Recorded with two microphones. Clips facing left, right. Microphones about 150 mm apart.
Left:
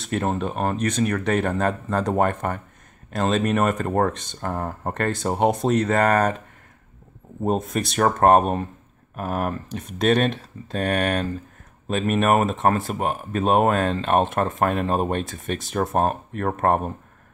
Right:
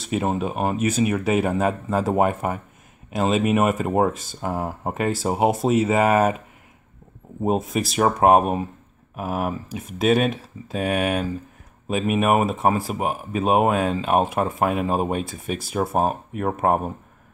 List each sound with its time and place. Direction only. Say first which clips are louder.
0.0 s speech: right 1 dB; 5° right (ahead or behind)
7.4 s speech: right 1 dB; centre (ahead or behind)